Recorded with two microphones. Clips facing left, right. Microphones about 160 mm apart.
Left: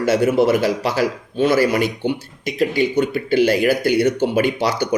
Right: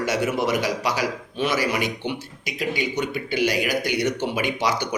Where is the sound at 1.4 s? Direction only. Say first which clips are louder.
Left 8 dB; 50° left (ahead or behind).